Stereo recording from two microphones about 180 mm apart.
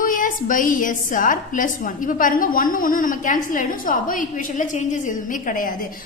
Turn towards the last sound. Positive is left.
turn(degrees=50)  # may be behind; listen again after turning